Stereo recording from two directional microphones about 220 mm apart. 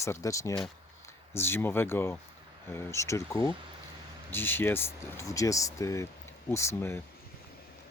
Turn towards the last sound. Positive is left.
turn(degrees=10)  # may be behind; listen again after turning